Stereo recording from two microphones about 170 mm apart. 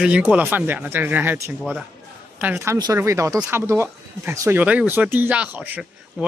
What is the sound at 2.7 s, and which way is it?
Speech, 20° right (ahead or behind).